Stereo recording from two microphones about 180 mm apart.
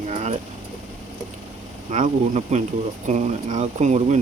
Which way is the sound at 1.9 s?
45° right (ahead or behind).